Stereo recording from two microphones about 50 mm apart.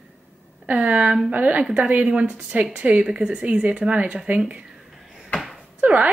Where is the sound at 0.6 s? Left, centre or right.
Right.